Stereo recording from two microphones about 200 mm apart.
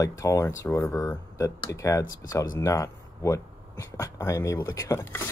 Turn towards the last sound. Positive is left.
turn(degrees=15)  # may be behind; listen again after turning